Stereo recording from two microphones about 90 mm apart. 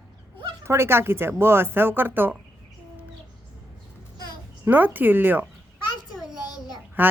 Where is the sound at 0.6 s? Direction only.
30° right (ahead or behind).